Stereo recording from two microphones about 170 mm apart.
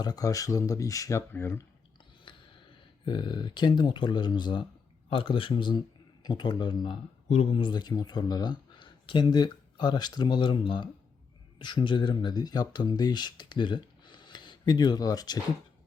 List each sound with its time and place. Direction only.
0.0 s speech: 20° left (ahead or behind)
3.0 s speech: 25° left (ahead or behind)